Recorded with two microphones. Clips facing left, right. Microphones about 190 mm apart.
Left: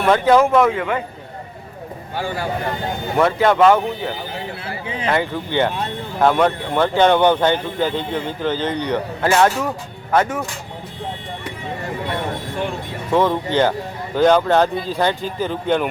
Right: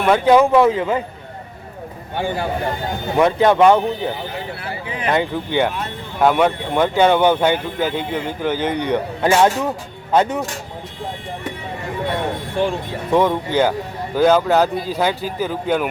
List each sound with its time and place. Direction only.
0.0 s speech: 10° right (ahead or behind)
0.6 s a man's voice: 25° right (ahead or behind)
3.2 s speech: 15° right (ahead or behind)
13.1 s speech: 10° right (ahead or behind)